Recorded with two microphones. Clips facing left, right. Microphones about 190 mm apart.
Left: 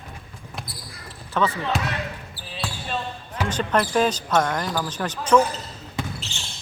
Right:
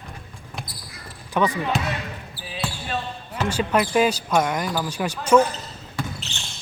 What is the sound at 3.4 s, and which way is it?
Speech, 10° right (ahead or behind).